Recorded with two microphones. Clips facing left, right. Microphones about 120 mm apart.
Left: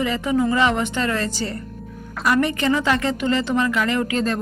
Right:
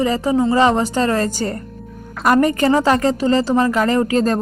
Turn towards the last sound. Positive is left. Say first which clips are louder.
# right 5 dB
turn(degrees=-40)  # may be behind; listen again after turning